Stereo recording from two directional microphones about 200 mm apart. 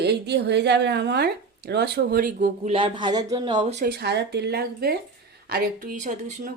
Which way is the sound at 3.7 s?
50° right (ahead or behind).